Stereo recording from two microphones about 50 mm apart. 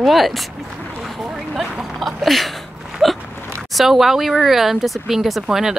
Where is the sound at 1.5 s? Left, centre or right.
Centre.